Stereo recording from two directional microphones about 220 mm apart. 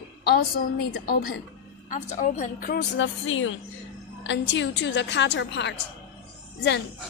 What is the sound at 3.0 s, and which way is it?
A woman's voice, 60° left (ahead or behind).